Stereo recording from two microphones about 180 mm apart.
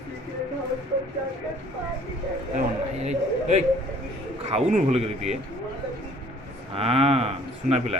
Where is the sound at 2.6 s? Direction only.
40° right (ahead or behind).